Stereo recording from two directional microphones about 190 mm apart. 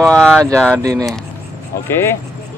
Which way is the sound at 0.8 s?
20° right (ahead or behind).